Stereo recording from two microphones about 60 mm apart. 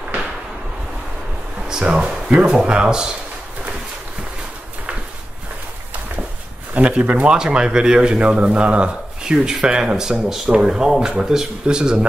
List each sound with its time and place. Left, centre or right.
1.7 s speech: centre
6.7 s speech: right
7.2 s speech: centre